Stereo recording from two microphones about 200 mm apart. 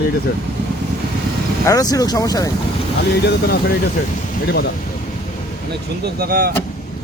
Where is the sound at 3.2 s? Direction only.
50° left (ahead or behind).